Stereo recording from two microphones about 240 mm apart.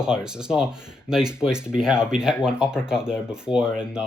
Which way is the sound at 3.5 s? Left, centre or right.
Centre.